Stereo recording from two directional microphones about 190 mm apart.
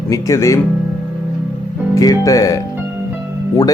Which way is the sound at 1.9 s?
20° left (ahead or behind).